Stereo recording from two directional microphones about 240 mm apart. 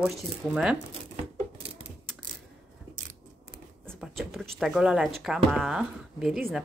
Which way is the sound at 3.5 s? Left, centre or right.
Centre.